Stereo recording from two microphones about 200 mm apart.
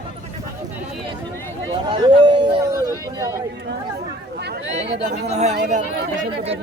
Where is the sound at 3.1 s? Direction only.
15° right (ahead or behind).